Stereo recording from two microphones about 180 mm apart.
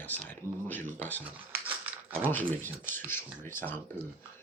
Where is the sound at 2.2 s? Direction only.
10° left (ahead or behind).